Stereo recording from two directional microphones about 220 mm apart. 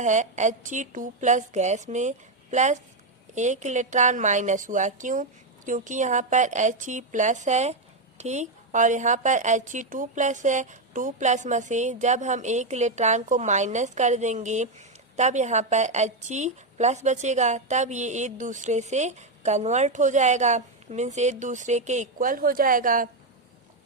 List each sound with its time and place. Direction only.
0.0 s a woman's voice: 35° right (ahead or behind)